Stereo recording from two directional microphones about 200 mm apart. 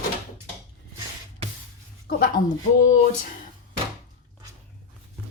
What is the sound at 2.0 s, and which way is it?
Speech, 45° left (ahead or behind).